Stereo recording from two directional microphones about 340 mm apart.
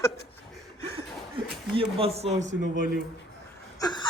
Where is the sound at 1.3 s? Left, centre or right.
Centre.